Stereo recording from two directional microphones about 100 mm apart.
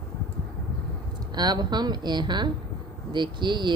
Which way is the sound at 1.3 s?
45° right (ahead or behind).